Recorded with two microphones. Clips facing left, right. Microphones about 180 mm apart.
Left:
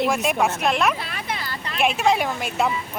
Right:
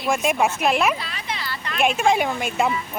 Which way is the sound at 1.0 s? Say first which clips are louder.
Left 1 dB; 55° left (ahead or behind).